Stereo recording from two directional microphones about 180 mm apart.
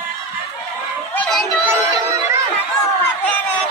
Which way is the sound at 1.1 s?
5° left (ahead or behind).